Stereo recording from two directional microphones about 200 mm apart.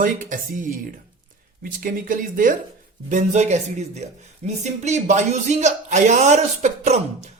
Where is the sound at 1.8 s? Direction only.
45° right (ahead or behind).